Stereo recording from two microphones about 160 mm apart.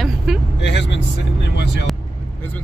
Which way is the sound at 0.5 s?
90° left.